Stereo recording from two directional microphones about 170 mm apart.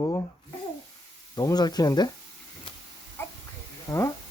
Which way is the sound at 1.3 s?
25° left (ahead or behind).